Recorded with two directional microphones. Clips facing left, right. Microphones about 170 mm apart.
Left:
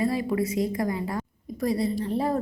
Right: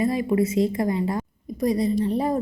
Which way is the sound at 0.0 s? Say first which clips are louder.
Right 4 dB; 20° right (ahead or behind).